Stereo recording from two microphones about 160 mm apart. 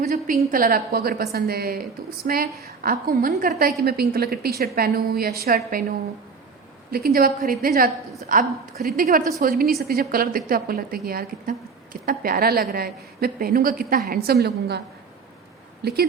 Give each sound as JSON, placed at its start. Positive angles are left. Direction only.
{"t": 0.1, "sound": "a woman's voice", "side_deg": -60}
{"t": 6.9, "sound": "a woman's voice", "side_deg": -70}
{"t": 15.8, "sound": "speech", "side_deg": -85}